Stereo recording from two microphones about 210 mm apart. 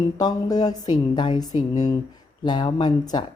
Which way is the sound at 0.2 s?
15° left (ahead or behind).